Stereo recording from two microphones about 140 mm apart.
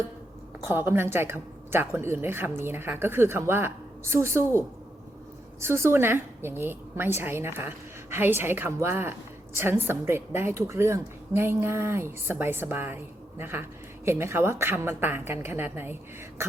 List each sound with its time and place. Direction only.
0.6 s a woman's voice: 15° right (ahead or behind)